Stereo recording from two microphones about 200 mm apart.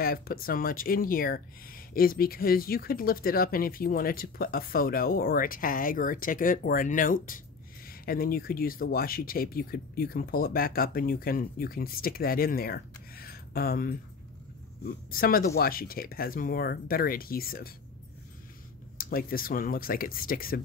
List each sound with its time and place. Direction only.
0.0 s speech: 50° left (ahead or behind)
15.0 s speech: 45° left (ahead or behind)
18.9 s speech: 45° left (ahead or behind)